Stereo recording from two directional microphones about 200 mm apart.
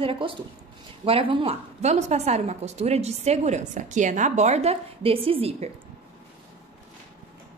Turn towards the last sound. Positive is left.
turn(degrees=-30)  # may be behind; listen again after turning